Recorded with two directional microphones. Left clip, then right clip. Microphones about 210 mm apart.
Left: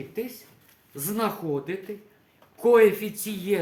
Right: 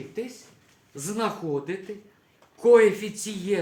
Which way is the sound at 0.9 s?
20° left (ahead or behind).